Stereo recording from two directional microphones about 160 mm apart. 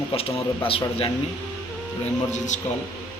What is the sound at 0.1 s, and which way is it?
Speech, 35° left (ahead or behind).